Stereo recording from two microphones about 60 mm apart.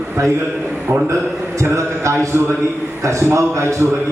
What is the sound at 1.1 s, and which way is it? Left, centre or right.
A man's voice, right.